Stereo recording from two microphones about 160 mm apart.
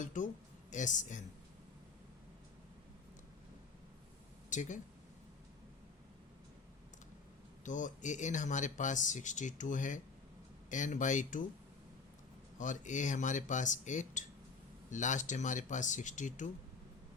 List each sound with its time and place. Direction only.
0.0 s speech: 50° left (ahead or behind)
4.4 s speech: 50° left (ahead or behind)
7.6 s speech: 50° left (ahead or behind)
12.5 s speech: 50° left (ahead or behind)